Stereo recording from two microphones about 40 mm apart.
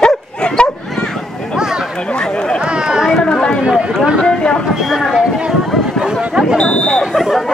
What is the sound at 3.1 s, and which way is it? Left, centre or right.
Chatter, centre.